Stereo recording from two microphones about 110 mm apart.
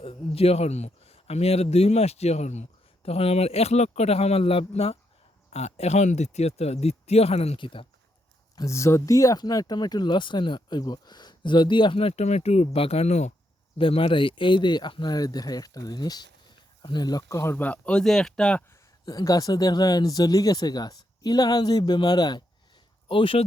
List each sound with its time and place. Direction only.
0.0 s speech: 60° left (ahead or behind)
5.5 s speech: 80° left
7.6 s speech: 50° left (ahead or behind)
8.5 s speech: 25° left (ahead or behind); by 13.3 s 90° left
13.7 s speech: 55° left (ahead or behind); by 18.6 s 5° left (ahead or behind)
19.0 s speech: 35° left (ahead or behind)
23.0 s speech: 50° left (ahead or behind)